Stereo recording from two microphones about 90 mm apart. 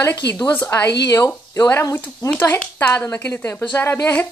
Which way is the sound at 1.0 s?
40° left (ahead or behind).